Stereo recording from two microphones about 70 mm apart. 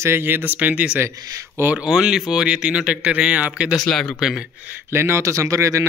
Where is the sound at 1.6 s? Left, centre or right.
Right.